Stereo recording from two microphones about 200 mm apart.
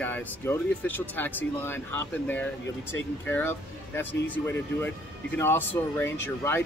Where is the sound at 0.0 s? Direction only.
10° left (ahead or behind).